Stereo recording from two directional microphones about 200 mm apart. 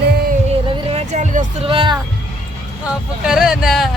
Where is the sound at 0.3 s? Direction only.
30° right (ahead or behind).